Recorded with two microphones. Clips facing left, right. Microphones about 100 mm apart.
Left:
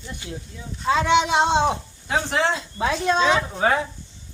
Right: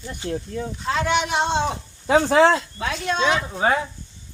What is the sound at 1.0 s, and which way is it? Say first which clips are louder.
Speech: left 3 dB; 15° left (ahead or behind).